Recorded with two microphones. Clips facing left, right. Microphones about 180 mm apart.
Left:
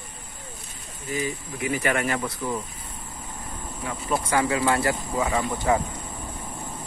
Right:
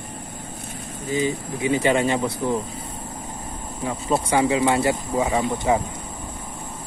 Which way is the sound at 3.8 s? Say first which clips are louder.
Right 4 dB; 30° right (ahead or behind).